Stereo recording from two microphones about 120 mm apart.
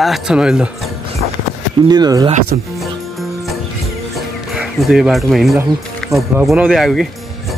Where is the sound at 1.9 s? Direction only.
35° right (ahead or behind).